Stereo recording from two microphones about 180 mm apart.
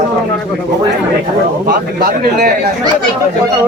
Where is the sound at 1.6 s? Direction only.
60° right (ahead or behind).